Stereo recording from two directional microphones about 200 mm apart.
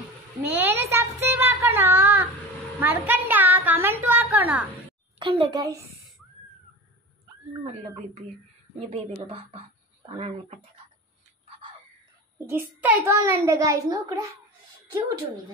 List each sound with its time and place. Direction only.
0.4 s a sound: 10° right (ahead or behind)
5.2 s a child's voice: 25° right (ahead or behind)
7.6 s speech: 35° right (ahead or behind)
12.4 s a child's voice: 10° right (ahead or behind)